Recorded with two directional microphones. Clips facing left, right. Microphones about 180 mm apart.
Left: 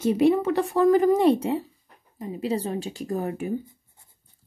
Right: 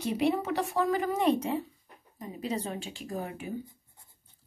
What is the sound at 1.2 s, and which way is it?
Speech, 30° left (ahead or behind).